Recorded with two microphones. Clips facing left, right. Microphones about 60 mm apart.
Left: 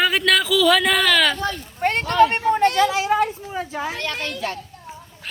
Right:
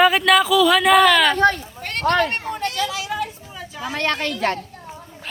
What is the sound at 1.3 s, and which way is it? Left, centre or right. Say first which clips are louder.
Speech: right 8 dB; right.